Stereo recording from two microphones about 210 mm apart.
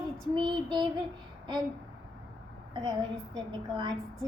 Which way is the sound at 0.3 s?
20° right (ahead or behind).